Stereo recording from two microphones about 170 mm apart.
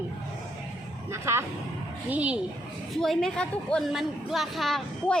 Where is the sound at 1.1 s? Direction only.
15° right (ahead or behind).